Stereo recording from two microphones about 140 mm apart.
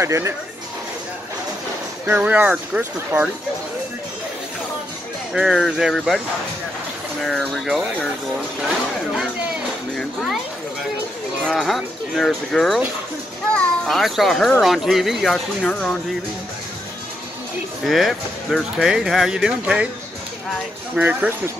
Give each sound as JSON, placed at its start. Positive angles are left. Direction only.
{"t": 0.0, "sound": "speech", "side_deg": -20}
{"t": 2.0, "sound": "speech", "side_deg": -15}
{"t": 5.3, "sound": "speech", "side_deg": -5}
{"t": 11.4, "sound": "a child's voice", "side_deg": 0}
{"t": 17.8, "sound": "speech", "side_deg": 0}
{"t": 20.9, "sound": "speech", "side_deg": -10}